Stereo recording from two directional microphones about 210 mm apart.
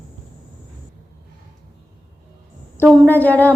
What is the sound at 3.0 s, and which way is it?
Speech, 10° left (ahead or behind).